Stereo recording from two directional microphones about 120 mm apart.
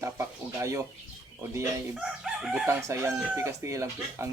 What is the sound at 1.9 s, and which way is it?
Chicken, 5° right (ahead or behind).